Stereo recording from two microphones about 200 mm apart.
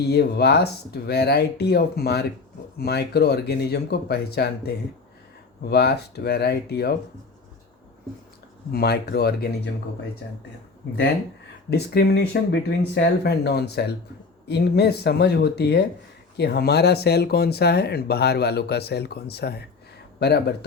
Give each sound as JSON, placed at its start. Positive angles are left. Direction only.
{"t": 0.1, "sound": "speech", "side_deg": 55}
{"t": 8.7, "sound": "speech", "side_deg": 50}
{"t": 11.7, "sound": "speech", "side_deg": 55}